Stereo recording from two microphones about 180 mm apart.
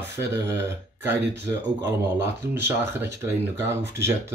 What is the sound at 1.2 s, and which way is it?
Speech, 70° right (ahead or behind).